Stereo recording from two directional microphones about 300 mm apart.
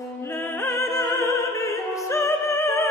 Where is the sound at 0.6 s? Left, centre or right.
Centre.